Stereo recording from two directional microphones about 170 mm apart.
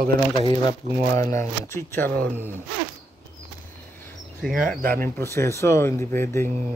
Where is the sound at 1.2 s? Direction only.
20° left (ahead or behind).